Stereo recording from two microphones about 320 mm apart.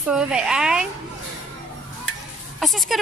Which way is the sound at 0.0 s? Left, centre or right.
Centre.